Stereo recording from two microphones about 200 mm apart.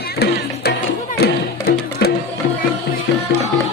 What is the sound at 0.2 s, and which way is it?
Music, 55° left (ahead or behind).